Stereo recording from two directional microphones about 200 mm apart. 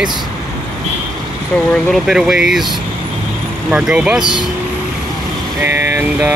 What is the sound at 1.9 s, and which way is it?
Speech, centre (ahead or behind).